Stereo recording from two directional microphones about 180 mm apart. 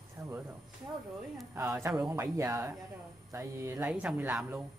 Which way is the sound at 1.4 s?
5° right (ahead or behind).